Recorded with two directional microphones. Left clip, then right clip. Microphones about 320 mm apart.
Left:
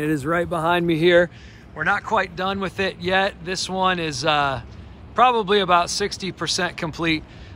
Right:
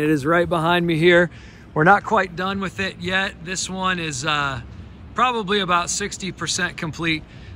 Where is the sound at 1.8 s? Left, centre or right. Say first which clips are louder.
Right 5 dB; centre.